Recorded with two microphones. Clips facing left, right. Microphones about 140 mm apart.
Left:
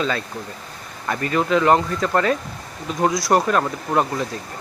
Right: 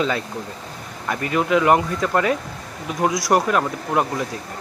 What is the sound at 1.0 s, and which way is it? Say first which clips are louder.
Speech: even; 10° right (ahead or behind).